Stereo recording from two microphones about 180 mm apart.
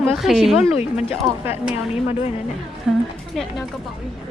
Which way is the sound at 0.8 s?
35° left (ahead or behind).